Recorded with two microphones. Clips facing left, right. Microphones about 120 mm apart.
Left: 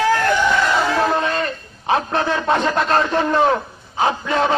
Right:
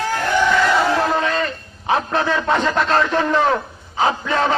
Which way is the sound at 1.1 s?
15° left (ahead or behind).